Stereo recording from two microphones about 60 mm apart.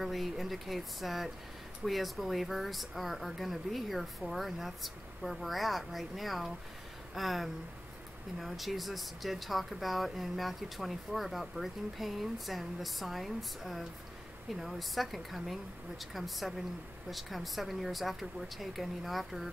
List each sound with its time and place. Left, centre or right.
0.0 s speech: centre